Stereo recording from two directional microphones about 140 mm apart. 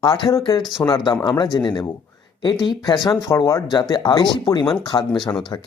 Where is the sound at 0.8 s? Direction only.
30° left (ahead or behind).